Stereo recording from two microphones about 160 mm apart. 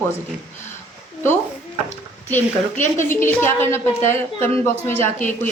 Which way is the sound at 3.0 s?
15° left (ahead or behind).